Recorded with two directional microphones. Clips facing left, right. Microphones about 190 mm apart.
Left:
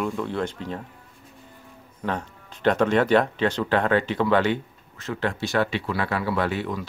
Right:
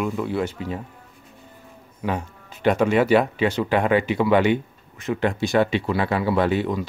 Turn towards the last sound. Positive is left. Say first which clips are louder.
# right 5 dB
turn(degrees=-15)  # may be behind; listen again after turning